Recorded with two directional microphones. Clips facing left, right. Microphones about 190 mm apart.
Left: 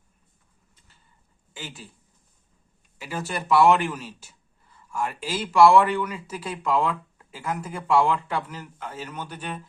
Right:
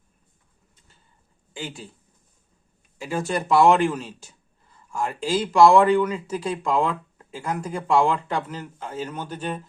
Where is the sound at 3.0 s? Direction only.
25° right (ahead or behind).